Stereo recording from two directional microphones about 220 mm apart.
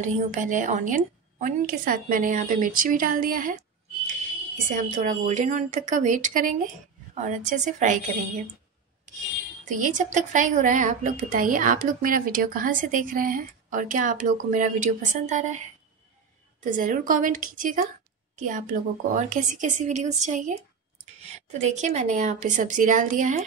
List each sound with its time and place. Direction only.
0.0 s speech: 35° right (ahead or behind)
4.6 s speech: 35° right (ahead or behind)
9.8 s speech: 35° right (ahead or behind)
16.7 s speech: 35° right (ahead or behind)